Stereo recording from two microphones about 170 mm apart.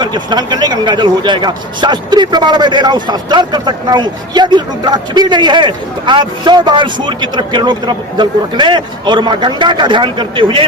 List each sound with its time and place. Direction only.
0.0 s a man's voice: 25° right (ahead or behind)